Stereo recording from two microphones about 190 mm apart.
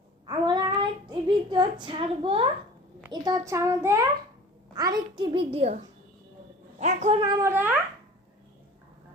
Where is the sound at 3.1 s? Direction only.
20° right (ahead or behind).